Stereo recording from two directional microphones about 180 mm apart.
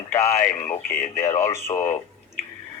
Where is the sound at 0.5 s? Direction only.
40° left (ahead or behind).